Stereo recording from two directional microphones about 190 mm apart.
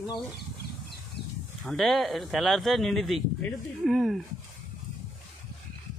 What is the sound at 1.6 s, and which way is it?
Speech, centre (ahead or behind).